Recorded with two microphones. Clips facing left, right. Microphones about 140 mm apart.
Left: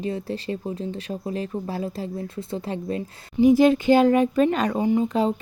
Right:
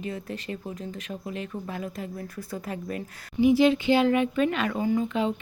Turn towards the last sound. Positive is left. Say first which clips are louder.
# left 4 dB
turn(degrees=35)  # may be behind; listen again after turning